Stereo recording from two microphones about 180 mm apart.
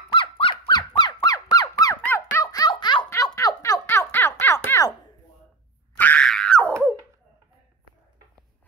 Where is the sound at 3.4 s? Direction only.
20° left (ahead or behind).